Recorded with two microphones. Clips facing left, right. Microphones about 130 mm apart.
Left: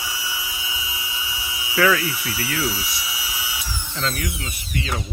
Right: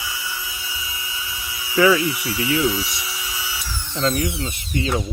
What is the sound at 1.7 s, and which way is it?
Speech, 15° right (ahead or behind).